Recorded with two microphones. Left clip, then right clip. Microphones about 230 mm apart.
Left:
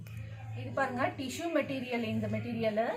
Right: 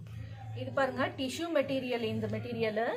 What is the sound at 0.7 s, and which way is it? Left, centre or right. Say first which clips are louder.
A woman's voice: right 1 dB; right.